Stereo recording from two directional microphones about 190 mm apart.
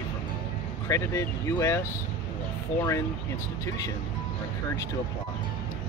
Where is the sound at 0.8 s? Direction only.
15° left (ahead or behind).